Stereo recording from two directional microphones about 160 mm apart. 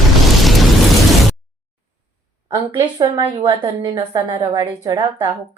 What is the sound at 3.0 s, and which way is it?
A woman's voice, 30° right (ahead or behind).